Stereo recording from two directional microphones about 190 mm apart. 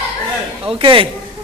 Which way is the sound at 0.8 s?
25° right (ahead or behind).